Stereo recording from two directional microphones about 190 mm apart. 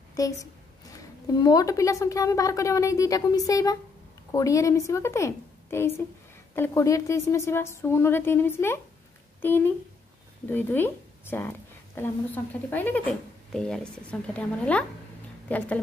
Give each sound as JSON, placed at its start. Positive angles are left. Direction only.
{"t": 0.1, "sound": "a woman's voice", "side_deg": 20}